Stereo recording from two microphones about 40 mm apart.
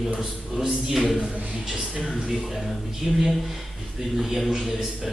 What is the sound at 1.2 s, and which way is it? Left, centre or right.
Speech, centre.